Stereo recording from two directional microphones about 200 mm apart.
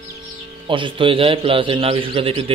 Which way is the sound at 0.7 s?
25° right (ahead or behind).